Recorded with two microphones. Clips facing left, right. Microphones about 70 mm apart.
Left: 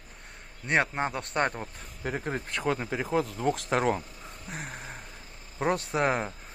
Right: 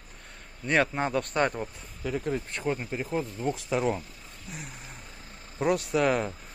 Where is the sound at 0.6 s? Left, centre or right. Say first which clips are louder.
Right 1 dB; left.